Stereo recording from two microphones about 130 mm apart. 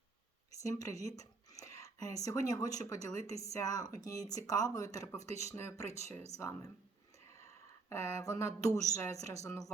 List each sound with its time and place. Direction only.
0.6 s speech: 25° left (ahead or behind)
7.3 s speech: 20° left (ahead or behind)